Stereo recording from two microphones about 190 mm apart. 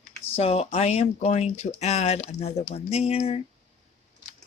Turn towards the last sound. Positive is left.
turn(degrees=30)  # may be behind; listen again after turning